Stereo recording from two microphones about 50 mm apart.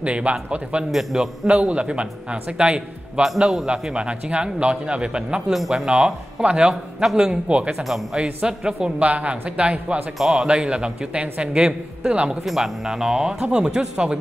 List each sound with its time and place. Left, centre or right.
0.0 s speech: right
0.9 s speech: centre
3.6 s speech: right
5.5 s speech: centre
5.9 s speech: centre
9.0 s speech: right
10.1 s speech: centre
10.5 s speech: centre
12.4 s speech: centre